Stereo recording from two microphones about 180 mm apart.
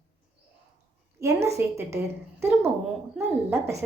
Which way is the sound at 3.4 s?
15° right (ahead or behind).